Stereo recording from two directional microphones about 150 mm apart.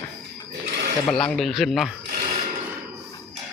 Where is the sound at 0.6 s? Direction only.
85° right.